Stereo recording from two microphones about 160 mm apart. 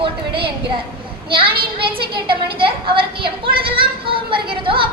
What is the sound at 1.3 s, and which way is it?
Speech, 35° right (ahead or behind).